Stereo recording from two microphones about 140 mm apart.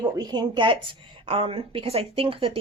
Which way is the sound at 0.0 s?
30° right (ahead or behind).